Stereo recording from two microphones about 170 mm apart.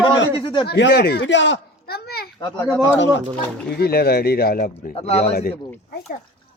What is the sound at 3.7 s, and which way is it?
Speech, 65° left (ahead or behind).